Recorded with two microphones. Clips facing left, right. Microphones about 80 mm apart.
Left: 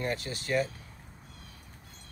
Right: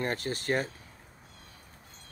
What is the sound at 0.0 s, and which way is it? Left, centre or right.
Speech, right.